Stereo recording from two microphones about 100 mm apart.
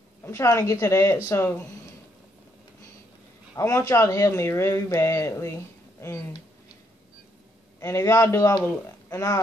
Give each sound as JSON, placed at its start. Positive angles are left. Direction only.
{"t": 0.2, "sound": "speech", "side_deg": 30}
{"t": 3.5, "sound": "speech", "side_deg": 30}
{"t": 7.8, "sound": "speech", "side_deg": 30}